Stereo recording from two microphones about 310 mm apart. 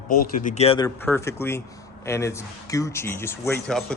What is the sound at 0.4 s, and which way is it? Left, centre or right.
Speech, left.